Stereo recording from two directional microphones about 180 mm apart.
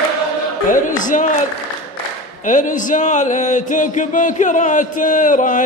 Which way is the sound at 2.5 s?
45° left (ahead or behind).